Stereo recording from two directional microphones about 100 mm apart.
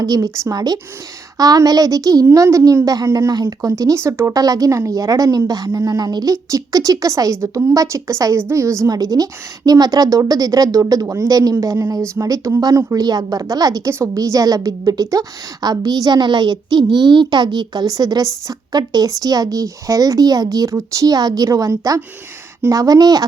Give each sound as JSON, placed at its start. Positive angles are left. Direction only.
{"t": 0.0, "sound": "a woman's voice", "side_deg": -35}